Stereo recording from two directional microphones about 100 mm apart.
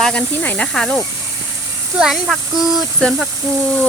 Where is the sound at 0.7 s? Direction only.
5° left (ahead or behind).